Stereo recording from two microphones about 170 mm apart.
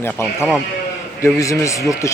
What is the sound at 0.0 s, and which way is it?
A man's voice, 15° left (ahead or behind).